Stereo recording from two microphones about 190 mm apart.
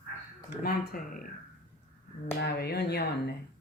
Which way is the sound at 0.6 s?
50° left (ahead or behind).